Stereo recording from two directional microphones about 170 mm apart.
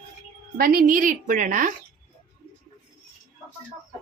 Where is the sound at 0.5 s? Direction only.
60° right (ahead or behind).